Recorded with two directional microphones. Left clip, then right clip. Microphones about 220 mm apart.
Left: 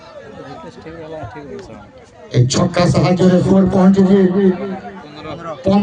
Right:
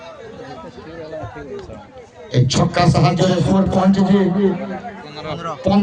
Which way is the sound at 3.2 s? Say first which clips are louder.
Left 4 dB; 35° right (ahead or behind).